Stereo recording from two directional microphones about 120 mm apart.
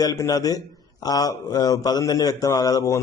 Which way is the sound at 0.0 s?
30° left (ahead or behind).